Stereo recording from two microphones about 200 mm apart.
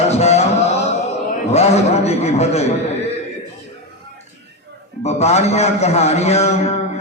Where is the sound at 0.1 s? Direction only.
30° left (ahead or behind).